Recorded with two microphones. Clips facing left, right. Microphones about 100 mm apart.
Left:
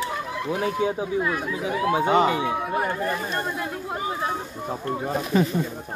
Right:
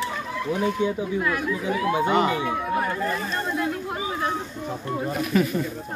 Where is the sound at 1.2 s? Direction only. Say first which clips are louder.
Right 1 dB; 20° left (ahead or behind).